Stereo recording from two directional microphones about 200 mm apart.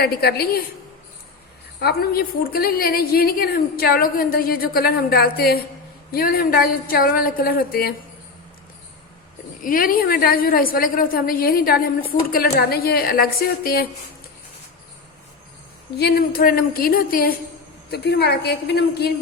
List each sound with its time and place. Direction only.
0.0 s a woman's voice: 50° left (ahead or behind)
1.8 s a woman's voice: 50° left (ahead or behind)
9.6 s a woman's voice: 45° left (ahead or behind)
16.0 s a woman's voice: 50° left (ahead or behind)